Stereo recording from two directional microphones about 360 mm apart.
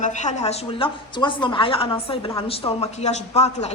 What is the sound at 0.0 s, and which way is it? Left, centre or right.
A woman's voice, centre.